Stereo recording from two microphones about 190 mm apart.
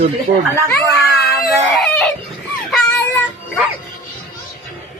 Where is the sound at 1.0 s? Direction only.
Centre (ahead or behind).